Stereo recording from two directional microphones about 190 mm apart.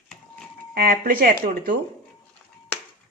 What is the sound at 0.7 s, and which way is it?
Speech, 50° right (ahead or behind).